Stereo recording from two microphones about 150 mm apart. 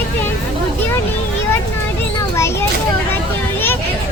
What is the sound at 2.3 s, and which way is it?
Children playing, 15° left (ahead or behind).